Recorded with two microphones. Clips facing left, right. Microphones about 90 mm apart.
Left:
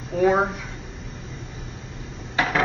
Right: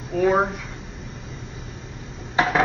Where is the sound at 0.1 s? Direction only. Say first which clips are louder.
Even; centre (ahead or behind).